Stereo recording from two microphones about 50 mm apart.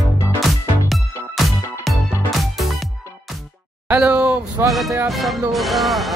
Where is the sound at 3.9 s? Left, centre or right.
Right.